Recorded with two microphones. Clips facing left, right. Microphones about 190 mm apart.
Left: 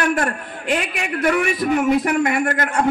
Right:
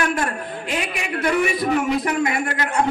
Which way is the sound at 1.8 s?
50° left (ahead or behind).